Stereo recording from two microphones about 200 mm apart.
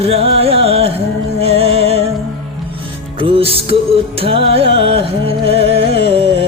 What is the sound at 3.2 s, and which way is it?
Music, 25° right (ahead or behind).